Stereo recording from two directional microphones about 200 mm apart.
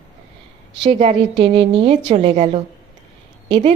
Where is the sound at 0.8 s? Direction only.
30° right (ahead or behind).